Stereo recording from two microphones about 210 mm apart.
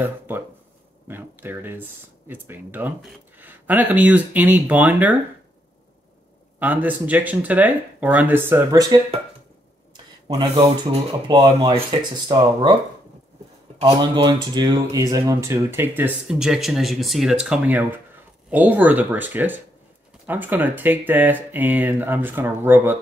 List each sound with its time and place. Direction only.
1.0 s speech: 10° right (ahead or behind)
6.6 s speech: 10° right (ahead or behind)
10.2 s speech: 20° right (ahead or behind)
13.7 s speech: 25° right (ahead or behind)